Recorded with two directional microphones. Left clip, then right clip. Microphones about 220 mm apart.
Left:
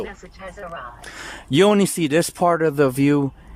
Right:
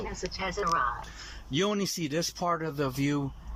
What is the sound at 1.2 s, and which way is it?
Speech, 50° left (ahead or behind).